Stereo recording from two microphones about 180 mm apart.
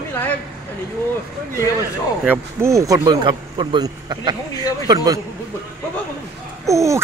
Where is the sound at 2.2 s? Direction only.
10° right (ahead or behind).